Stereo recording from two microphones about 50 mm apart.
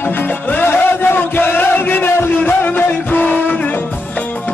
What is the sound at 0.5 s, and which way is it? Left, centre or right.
Chant, left.